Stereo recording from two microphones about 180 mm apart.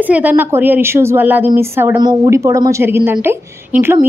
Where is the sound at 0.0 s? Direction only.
10° right (ahead or behind).